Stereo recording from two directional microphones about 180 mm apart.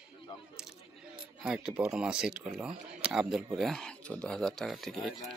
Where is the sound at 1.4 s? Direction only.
5° right (ahead or behind).